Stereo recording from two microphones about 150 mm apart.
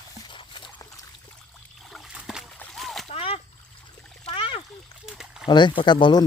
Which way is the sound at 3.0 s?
40° left (ahead or behind).